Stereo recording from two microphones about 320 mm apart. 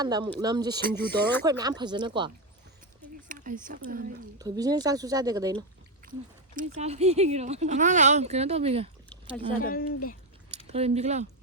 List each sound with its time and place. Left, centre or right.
0.0 s a woman's voice: centre
0.8 s speech: right
1.5 s a woman's voice: centre; by 4.1 s right
4.4 s a woman's voice: centre
6.0 s a sound: right
6.6 s speech: centre
9.6 s speech: left
10.7 s speech: centre